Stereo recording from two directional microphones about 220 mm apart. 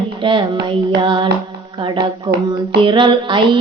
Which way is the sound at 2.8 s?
20° right (ahead or behind).